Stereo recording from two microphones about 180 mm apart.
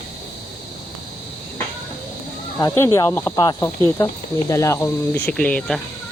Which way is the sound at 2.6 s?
15° left (ahead or behind).